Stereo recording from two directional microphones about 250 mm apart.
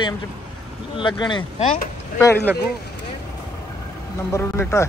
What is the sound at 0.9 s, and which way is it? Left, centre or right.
Speech, centre.